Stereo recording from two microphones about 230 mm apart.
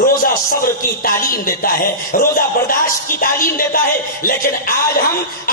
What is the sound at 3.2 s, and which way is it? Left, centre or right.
Speech, left.